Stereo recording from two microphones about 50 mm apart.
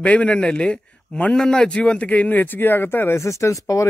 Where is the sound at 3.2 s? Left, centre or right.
Left.